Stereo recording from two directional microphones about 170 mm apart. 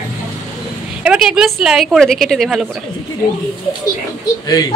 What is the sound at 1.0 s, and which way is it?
A woman's voice, 5° right (ahead or behind).